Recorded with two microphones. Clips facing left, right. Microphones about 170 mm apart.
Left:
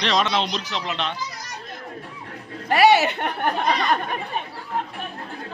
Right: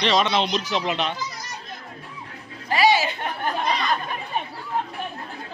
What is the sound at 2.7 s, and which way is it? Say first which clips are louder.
Speech: left 3 dB; 65° left (ahead or behind).